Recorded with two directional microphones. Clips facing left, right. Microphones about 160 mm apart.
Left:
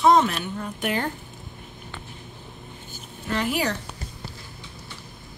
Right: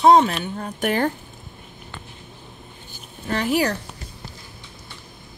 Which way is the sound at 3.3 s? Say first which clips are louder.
Right 4 dB; 40° right (ahead or behind).